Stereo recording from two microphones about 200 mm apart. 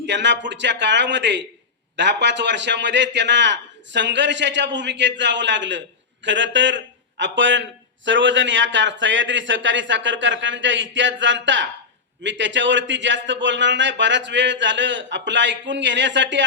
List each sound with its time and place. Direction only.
0.0 s a man's voice: 60° right (ahead or behind)